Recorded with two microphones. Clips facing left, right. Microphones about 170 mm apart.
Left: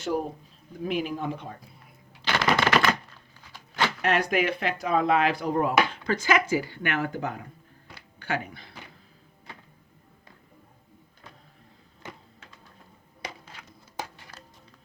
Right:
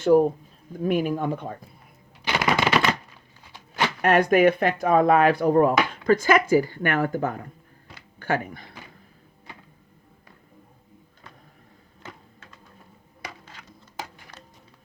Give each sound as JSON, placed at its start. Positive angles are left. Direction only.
{"t": 0.0, "sound": "speech", "side_deg": -45}
{"t": 2.2, "sound": "typewriter", "side_deg": -10}
{"t": 4.0, "sound": "speech", "side_deg": -50}